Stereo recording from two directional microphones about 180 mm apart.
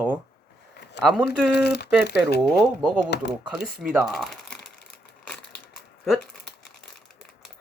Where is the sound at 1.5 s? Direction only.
65° left (ahead or behind).